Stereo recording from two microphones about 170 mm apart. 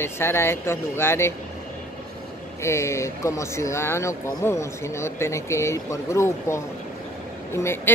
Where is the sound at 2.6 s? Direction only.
15° left (ahead or behind).